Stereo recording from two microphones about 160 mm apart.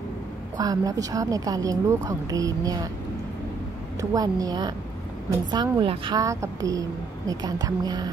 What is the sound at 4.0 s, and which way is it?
A woman's voice, 20° right (ahead or behind).